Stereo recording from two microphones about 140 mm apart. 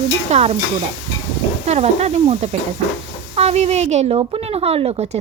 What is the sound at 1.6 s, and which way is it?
Speech, 50° right (ahead or behind).